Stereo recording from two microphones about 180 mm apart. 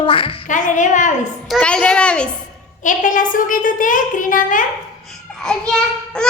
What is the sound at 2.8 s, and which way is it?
A child's voice, 45° left (ahead or behind).